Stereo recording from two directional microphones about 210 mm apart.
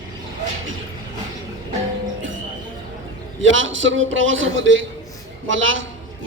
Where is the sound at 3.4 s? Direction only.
65° right (ahead or behind).